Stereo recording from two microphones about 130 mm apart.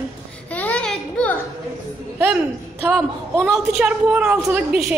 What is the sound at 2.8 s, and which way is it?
A woman's voice, 10° right (ahead or behind).